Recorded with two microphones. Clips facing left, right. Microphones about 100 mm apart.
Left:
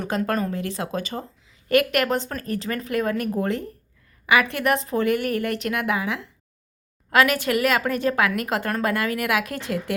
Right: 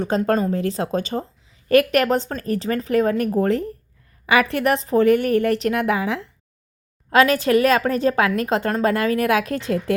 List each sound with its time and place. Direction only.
0.0 s a woman's voice: 25° right (ahead or behind)